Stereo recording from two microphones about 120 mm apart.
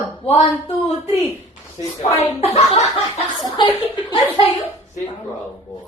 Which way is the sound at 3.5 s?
40° left (ahead or behind).